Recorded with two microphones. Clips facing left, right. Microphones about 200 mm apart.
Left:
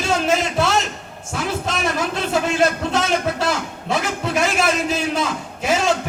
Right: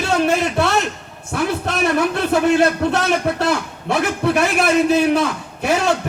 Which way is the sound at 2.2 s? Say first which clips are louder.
Right 3 dB; 60° right (ahead or behind).